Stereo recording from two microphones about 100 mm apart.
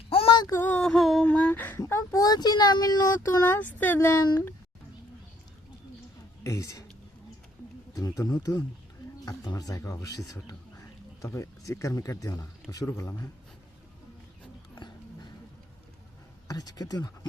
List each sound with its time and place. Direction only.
0.1 s a sound: 70° left (ahead or behind)
0.5 s music: 15° left (ahead or behind)
0.9 s mantra: centre (ahead or behind)
1.3 s a sound: 15° left (ahead or behind)
1.8 s speech: 30° left (ahead or behind)
3.5 s speech: 20° left (ahead or behind)
6.4 s speech: 35° left (ahead or behind)
7.9 s speech: 35° left (ahead or behind)
16.5 s speech: 40° left (ahead or behind)